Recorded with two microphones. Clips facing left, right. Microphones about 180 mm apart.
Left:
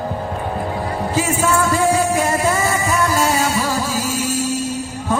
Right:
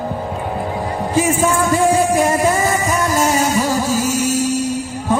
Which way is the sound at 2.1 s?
15° right (ahead or behind).